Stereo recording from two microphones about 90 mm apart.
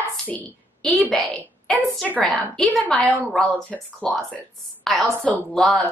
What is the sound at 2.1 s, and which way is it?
Speech, 15° left (ahead or behind).